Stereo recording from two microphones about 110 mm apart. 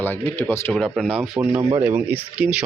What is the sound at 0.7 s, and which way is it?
Speech, 5° left (ahead or behind).